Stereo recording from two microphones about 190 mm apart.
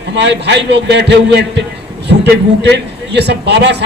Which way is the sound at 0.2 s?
65° right (ahead or behind).